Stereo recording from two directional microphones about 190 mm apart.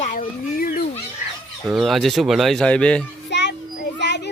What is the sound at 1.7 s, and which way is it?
Speech, centre (ahead or behind).